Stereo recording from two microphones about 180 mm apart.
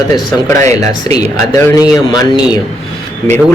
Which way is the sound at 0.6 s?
40° right (ahead or behind).